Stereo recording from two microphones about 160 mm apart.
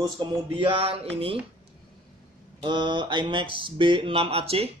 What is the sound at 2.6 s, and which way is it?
Speech, 30° right (ahead or behind).